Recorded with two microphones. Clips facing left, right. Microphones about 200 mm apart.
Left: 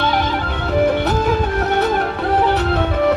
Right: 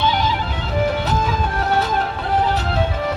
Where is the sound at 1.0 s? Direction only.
60° left (ahead or behind).